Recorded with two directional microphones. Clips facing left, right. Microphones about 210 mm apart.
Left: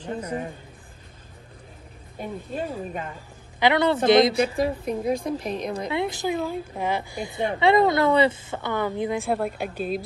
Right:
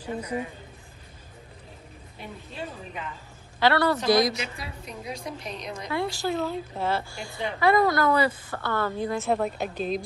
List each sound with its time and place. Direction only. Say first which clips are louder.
0.0 s a woman's voice: left 1 dB; 10° right (ahead or behind)
2.1 s a woman's voice: left 8 dB; 45° left (ahead or behind)
3.5 s a woman's voice: left 2 dB; 20° left (ahead or behind)
4.4 s a woman's voice: left 14 dB; 50° left (ahead or behind)
5.9 s a woman's voice: even; 20° left (ahead or behind)